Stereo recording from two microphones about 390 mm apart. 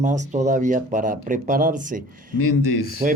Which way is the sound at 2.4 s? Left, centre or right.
Left.